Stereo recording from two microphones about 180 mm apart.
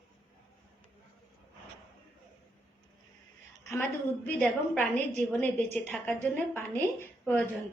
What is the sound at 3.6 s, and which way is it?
A woman's voice, 10° left (ahead or behind).